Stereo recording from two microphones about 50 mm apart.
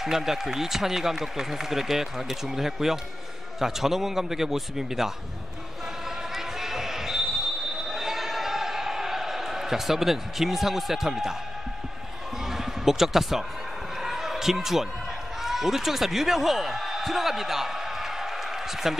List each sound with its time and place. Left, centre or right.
0.0 s speech: centre
6.0 s basketball bounce: centre
12.4 s a sound: centre
15.4 s speech: centre